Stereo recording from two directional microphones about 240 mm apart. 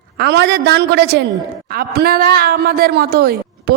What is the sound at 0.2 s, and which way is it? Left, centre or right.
A man's voice, right.